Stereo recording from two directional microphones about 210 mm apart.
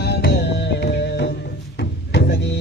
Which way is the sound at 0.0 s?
50° left (ahead or behind).